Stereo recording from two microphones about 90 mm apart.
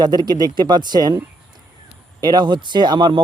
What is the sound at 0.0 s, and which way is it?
Speech, 50° right (ahead or behind).